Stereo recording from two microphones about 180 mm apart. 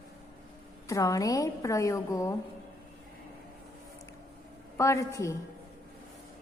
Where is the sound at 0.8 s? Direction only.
20° left (ahead or behind).